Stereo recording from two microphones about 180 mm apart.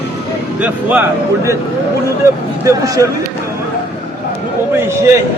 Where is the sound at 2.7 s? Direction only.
15° right (ahead or behind).